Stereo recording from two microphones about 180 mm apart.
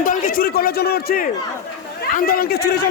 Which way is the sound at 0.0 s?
50° left (ahead or behind).